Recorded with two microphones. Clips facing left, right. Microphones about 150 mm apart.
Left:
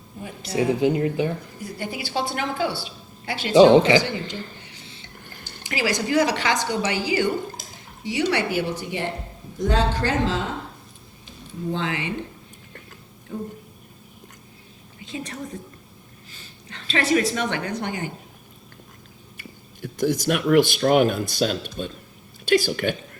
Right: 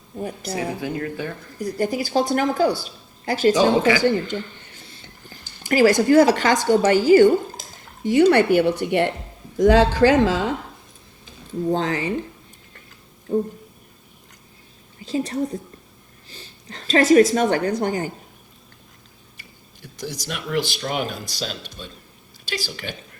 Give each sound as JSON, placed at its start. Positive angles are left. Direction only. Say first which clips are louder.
{"t": 0.2, "sound": "a woman's voice", "louder": "right 7 dB", "side_deg": -45}
{"t": 0.5, "sound": "speech", "louder": "left 8 dB", "side_deg": 20}
{"t": 1.5, "sound": "a woman's voice", "louder": "right 8 dB", "side_deg": -40}
{"t": 3.5, "sound": "speech", "louder": "left 7 dB", "side_deg": 20}
{"t": 4.0, "sound": "a woman's voice", "louder": "right 9 dB", "side_deg": -50}
{"t": 5.6, "sound": "a woman's voice", "louder": "right 9 dB", "side_deg": -45}
{"t": 9.6, "sound": "a man's voice", "louder": "right 8 dB", "side_deg": -90}
{"t": 11.7, "sound": "a woman's voice", "louder": "right 4 dB", "side_deg": -40}
{"t": 13.3, "sound": "a woman's voice", "louder": "right 10 dB", "side_deg": -40}
{"t": 15.0, "sound": "a woman's voice", "louder": "right 9 dB", "side_deg": -35}
{"t": 19.4, "sound": "a woman's voice", "louder": "left 10 dB", "side_deg": 55}